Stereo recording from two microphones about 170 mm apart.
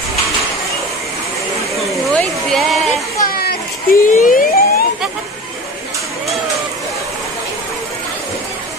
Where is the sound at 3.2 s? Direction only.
65° left (ahead or behind).